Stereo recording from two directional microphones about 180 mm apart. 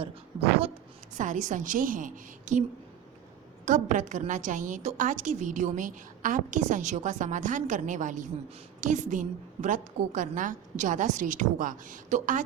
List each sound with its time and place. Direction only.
1.1 s a woman's voice: 45° right (ahead or behind)
3.7 s a woman's voice: 45° right (ahead or behind)